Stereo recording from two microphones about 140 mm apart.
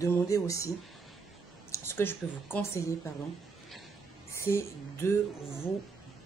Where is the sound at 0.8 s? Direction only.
Centre (ahead or behind).